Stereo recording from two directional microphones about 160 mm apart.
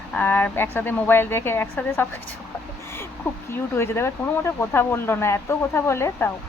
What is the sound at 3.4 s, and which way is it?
Speech, 15° left (ahead or behind).